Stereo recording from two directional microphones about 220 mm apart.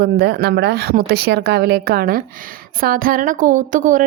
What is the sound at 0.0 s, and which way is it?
A woman's voice, 45° right (ahead or behind).